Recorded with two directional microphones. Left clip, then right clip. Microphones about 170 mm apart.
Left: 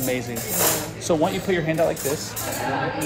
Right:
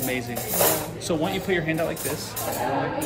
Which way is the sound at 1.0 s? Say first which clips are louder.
Left 6 dB; 5° left (ahead or behind).